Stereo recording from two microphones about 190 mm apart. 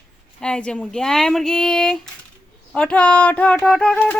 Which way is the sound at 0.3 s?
5° left (ahead or behind).